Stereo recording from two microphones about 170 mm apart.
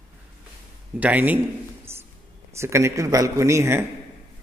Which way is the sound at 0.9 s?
10° right (ahead or behind).